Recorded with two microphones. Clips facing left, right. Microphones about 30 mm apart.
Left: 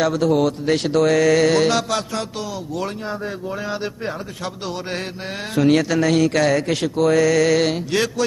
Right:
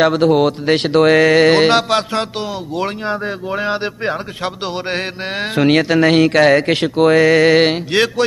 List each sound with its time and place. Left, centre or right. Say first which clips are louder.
0.0 s speech: right 5 dB; right